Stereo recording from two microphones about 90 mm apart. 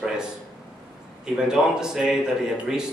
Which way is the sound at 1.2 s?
5° right (ahead or behind).